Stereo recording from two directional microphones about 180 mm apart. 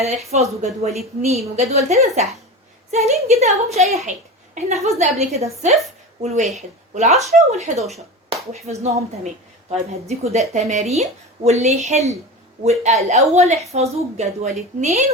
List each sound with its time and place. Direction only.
0.0 s speech: 35° right (ahead or behind)